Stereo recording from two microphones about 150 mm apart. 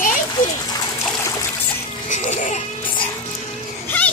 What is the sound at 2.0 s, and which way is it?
Music, 55° left (ahead or behind).